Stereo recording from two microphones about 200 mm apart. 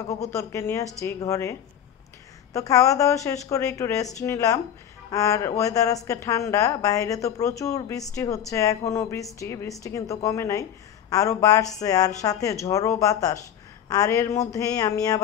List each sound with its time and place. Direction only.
0.1 s a woman's voice: 15° left (ahead or behind)